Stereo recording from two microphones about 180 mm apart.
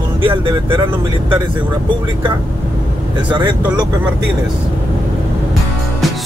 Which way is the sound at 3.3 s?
25° right (ahead or behind).